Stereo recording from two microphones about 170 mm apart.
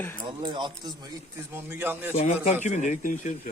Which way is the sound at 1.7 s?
10° right (ahead or behind).